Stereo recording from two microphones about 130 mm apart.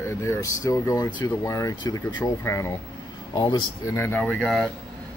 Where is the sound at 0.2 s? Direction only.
25° left (ahead or behind).